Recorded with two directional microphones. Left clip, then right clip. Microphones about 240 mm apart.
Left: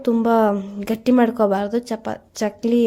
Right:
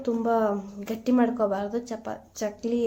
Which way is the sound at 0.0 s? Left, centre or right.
Left.